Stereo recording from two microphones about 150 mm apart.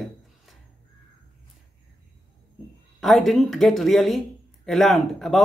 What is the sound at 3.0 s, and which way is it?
Speech, centre (ahead or behind).